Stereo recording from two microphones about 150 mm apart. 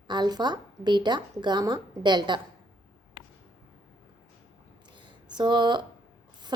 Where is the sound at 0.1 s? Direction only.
30° right (ahead or behind).